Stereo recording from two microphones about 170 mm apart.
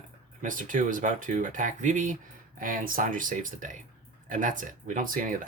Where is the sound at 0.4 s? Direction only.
50° right (ahead or behind).